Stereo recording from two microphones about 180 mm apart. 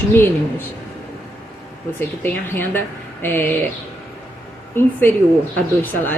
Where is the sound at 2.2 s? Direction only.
10° left (ahead or behind).